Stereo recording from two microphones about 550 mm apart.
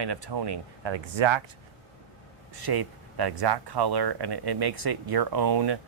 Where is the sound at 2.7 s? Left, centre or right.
Right.